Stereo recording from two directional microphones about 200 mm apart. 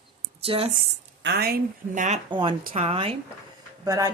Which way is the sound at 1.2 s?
55° right (ahead or behind).